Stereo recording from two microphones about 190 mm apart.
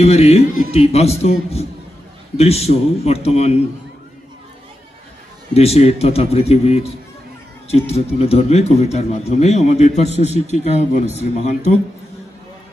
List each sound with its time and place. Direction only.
0.0 s a man's voice: 35° left (ahead or behind)
5.5 s a man's voice: 30° left (ahead or behind)